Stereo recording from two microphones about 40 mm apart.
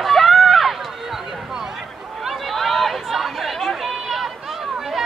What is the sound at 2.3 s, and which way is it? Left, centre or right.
Chatter, centre.